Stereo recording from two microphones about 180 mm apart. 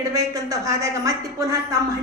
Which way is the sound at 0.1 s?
20° right (ahead or behind).